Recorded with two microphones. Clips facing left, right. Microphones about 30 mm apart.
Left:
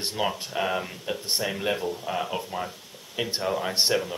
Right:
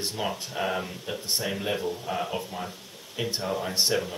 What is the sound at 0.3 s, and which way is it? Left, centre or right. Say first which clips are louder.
Speech: left 2 dB; centre.